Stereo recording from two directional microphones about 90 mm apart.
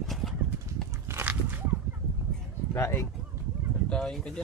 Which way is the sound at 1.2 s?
20° right (ahead or behind).